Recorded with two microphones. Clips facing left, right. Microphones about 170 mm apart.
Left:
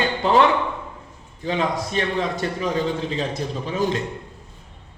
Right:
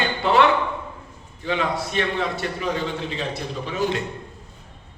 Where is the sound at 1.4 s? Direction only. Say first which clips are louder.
Left 1 dB; 40° left (ahead or behind).